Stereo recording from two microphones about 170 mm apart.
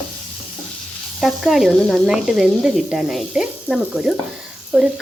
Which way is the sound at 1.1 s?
Centre (ahead or behind).